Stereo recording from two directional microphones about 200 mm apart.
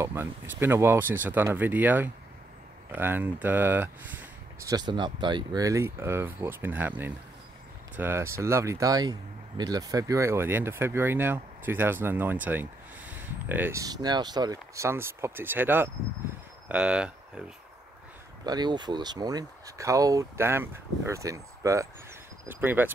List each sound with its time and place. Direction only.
0.0 s speech: 10° right (ahead or behind)
18.4 s speech: 20° right (ahead or behind)